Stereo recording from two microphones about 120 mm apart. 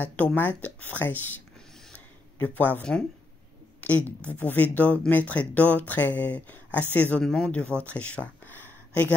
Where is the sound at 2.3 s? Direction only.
15° left (ahead or behind).